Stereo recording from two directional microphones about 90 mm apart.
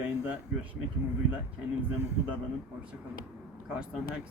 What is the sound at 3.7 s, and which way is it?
Speech, 10° right (ahead or behind).